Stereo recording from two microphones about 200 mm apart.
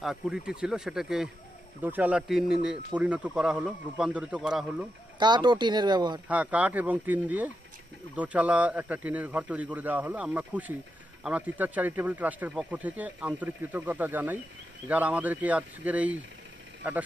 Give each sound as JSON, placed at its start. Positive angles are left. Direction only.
{"t": 0.0, "sound": "speech", "side_deg": -5}
{"t": 5.2, "sound": "speech", "side_deg": -20}
{"t": 6.2, "sound": "speech", "side_deg": -5}